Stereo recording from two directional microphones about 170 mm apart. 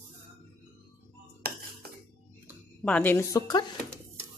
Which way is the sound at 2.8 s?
10° left (ahead or behind).